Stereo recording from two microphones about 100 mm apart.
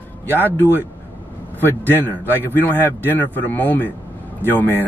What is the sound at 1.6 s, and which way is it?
A man's voice, 20° left (ahead or behind).